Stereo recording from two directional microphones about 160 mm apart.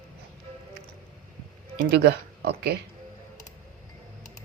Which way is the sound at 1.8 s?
90° right.